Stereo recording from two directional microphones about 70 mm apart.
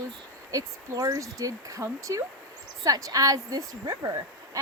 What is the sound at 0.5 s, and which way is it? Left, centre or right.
A woman's voice, right.